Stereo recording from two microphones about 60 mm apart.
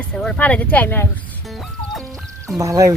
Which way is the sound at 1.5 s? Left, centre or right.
Centre.